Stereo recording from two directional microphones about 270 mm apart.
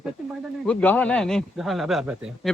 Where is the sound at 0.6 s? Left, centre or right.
Centre.